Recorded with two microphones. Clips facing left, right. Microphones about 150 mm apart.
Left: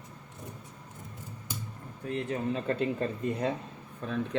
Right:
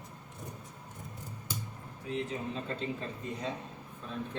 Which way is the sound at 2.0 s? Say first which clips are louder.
Left 4 dB; 60° left (ahead or behind).